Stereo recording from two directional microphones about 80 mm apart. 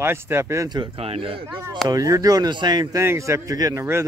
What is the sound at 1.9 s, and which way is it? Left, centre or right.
Speech, right.